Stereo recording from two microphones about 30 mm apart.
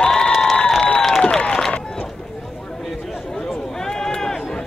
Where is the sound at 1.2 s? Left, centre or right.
Left.